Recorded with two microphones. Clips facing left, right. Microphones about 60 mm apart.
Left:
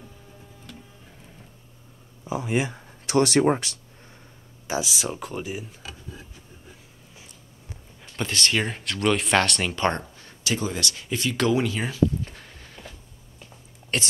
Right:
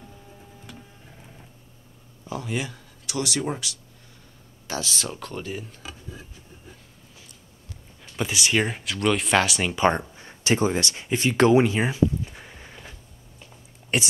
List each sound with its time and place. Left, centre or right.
2.2 s speech: left
3.1 s speech: left
4.6 s speech: centre
8.2 s speech: centre; by 12.0 s right
12.3 s a sound: centre
13.9 s speech: centre